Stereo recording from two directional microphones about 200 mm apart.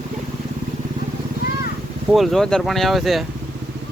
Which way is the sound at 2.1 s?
Centre (ahead or behind).